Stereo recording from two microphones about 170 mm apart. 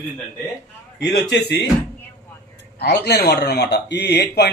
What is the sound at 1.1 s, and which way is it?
Speech, 80° left.